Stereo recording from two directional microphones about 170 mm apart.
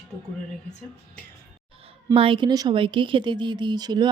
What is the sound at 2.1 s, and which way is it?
Speech, 30° right (ahead or behind).